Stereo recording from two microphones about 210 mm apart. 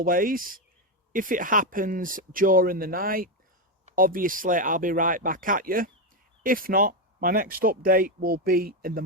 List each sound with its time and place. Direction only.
0.0 s speech: 40° right (ahead or behind)